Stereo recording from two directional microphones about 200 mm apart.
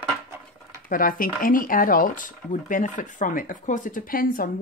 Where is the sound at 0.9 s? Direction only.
45° left (ahead or behind).